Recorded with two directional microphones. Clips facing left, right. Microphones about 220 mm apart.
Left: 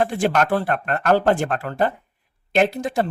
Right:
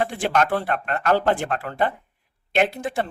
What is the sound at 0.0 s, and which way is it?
Speech, 45° left (ahead or behind).